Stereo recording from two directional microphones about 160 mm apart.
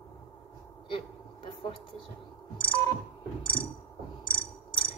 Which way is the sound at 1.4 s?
30° left (ahead or behind).